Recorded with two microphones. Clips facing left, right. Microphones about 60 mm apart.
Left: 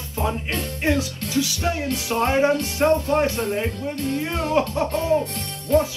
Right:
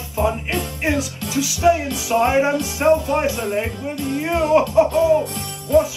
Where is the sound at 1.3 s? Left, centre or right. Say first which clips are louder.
Right 7 dB; centre.